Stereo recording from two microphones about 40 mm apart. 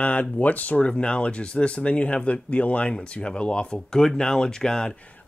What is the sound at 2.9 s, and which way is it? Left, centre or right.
Speech, left.